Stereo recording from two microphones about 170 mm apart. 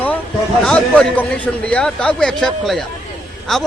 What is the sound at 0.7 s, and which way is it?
A man's voice, 5° left (ahead or behind).